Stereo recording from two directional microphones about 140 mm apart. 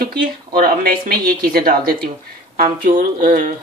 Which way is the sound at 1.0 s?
90° right.